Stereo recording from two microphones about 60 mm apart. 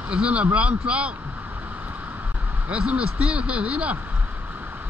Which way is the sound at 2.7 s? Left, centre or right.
Right.